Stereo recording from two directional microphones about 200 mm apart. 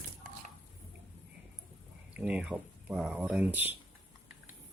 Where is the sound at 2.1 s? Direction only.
5° right (ahead or behind).